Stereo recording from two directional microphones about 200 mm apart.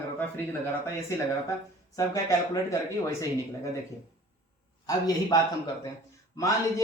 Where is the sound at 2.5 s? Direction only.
15° left (ahead or behind).